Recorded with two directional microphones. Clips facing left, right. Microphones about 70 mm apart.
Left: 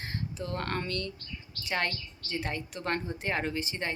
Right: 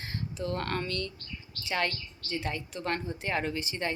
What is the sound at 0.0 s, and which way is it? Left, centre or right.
Speech, left.